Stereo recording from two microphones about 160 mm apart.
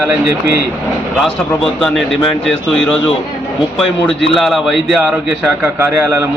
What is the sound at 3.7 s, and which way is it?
A man's voice, centre (ahead or behind).